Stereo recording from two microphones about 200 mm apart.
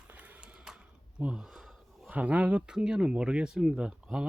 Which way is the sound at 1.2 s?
5° right (ahead or behind).